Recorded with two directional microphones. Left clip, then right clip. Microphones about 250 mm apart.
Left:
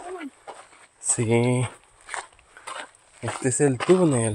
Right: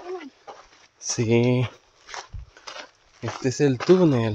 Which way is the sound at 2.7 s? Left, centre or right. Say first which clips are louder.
Left 3 dB; left.